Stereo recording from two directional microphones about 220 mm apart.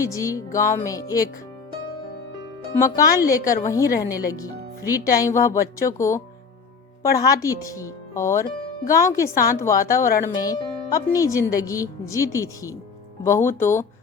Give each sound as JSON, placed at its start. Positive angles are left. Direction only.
{"t": 0.0, "sound": "speech", "side_deg": 15}
{"t": 2.7, "sound": "speech", "side_deg": 15}